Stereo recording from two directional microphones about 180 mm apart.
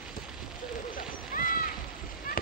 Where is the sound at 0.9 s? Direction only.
50° left (ahead or behind).